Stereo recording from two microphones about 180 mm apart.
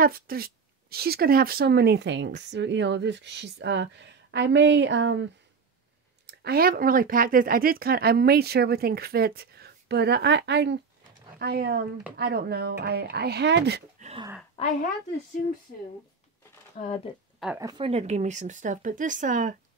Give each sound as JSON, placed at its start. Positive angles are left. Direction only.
{"t": 0.0, "sound": "speech", "side_deg": -55}
{"t": 6.2, "sound": "speech", "side_deg": -60}
{"t": 11.3, "sound": "speech", "side_deg": -65}
{"t": 13.9, "sound": "a sound", "side_deg": -40}
{"t": 17.6, "sound": "a woman's voice", "side_deg": -20}
{"t": 17.8, "sound": "speech", "side_deg": -35}